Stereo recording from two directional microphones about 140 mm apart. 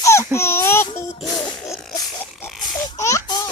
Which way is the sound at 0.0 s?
20° left (ahead or behind).